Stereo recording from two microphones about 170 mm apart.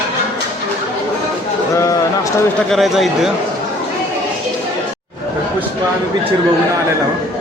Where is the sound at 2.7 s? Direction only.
Centre (ahead or behind).